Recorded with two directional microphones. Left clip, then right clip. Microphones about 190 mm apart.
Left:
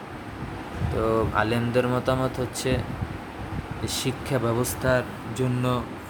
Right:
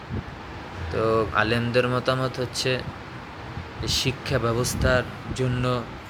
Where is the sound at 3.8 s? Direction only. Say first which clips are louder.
Right 4 dB; 10° left (ahead or behind).